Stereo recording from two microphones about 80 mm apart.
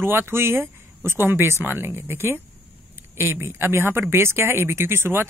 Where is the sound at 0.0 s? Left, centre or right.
Right.